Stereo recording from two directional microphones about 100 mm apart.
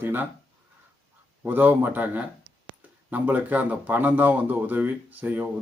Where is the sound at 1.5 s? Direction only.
20° right (ahead or behind).